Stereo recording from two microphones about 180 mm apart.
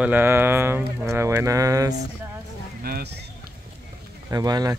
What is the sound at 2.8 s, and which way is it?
Speech, 60° right (ahead or behind).